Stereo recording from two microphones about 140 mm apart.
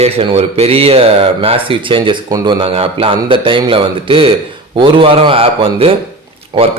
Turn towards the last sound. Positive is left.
turn(degrees=-45)  # may be behind; listen again after turning